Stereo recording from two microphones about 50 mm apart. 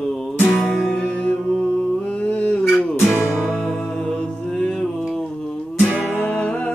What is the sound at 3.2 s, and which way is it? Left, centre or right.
Music, centre.